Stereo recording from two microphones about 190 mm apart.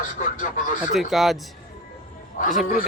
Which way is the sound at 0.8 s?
Centre (ahead or behind).